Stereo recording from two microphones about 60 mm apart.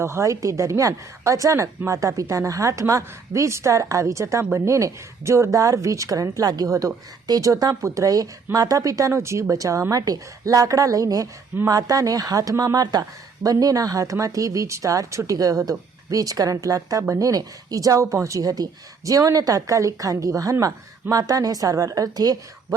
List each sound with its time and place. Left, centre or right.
0.0 s a woman's voice: right
9.9 s a woman's voice: right
17.2 s a woman's voice: right
19.0 s a woman's voice: right